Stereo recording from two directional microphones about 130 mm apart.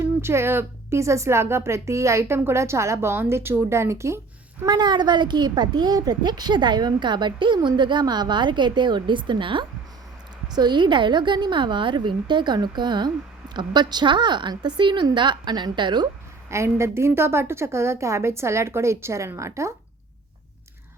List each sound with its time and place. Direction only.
0.0 s a woman's voice: 20° right (ahead or behind)
4.6 s a child's voice: 30° right (ahead or behind)
16.5 s a woman's voice: 20° right (ahead or behind)